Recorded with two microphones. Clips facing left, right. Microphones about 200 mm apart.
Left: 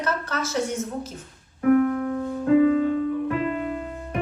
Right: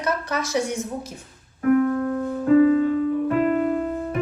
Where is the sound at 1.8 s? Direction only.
15° left (ahead or behind).